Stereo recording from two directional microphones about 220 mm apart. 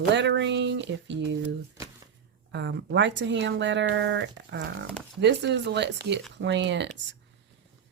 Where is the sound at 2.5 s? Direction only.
55° right (ahead or behind).